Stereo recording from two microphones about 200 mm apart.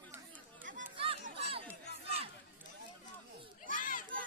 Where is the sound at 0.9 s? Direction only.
30° right (ahead or behind).